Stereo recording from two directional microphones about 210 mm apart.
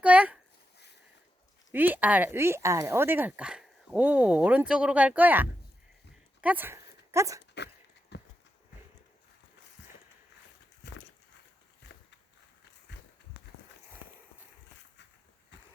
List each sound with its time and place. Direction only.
0.0 s speech: 5° right (ahead or behind)
1.7 s speech: 10° right (ahead or behind)
8.1 s horse: 55° left (ahead or behind)
10.8 s horse: 55° left (ahead or behind)
11.8 s walk: 55° left (ahead or behind)